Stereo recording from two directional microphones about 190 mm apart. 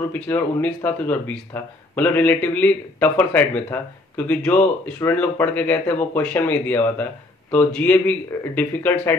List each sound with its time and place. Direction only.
0.1 s speech: 10° left (ahead or behind)